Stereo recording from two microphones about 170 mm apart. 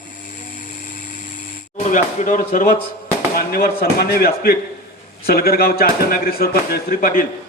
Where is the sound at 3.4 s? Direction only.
65° left (ahead or behind).